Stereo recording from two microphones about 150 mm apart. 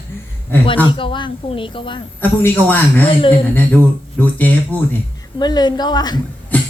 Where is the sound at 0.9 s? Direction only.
35° left (ahead or behind).